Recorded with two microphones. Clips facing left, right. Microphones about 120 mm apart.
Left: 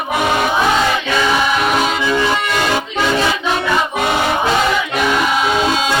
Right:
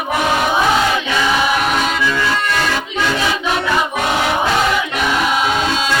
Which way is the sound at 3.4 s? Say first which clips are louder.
Left 1 dB; centre (ahead or behind).